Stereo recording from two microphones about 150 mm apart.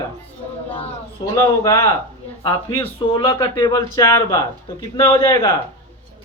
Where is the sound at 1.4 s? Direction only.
20° left (ahead or behind).